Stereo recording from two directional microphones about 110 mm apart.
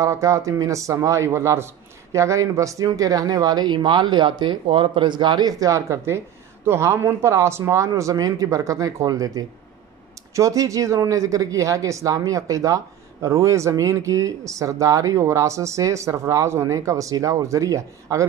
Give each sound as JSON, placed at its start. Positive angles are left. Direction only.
{"t": 0.0, "sound": "speech", "side_deg": -30}